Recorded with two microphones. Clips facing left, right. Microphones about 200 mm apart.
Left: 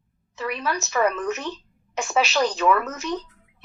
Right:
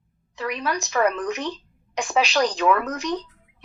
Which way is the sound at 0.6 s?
15° right (ahead or behind).